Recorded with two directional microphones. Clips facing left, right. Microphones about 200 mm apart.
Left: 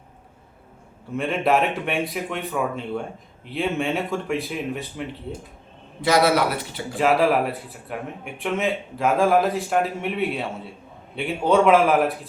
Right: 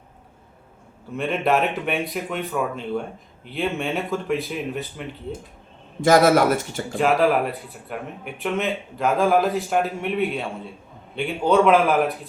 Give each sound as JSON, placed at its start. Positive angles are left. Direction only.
{"t": 1.1, "sound": "speech", "side_deg": 0}
{"t": 6.0, "sound": "a man's voice", "side_deg": -45}
{"t": 6.9, "sound": "speech", "side_deg": 0}